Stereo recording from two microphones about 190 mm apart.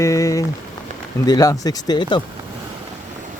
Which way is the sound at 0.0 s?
15° left (ahead or behind).